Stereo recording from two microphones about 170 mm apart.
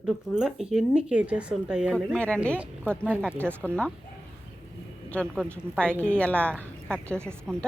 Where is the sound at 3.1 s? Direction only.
5° right (ahead or behind).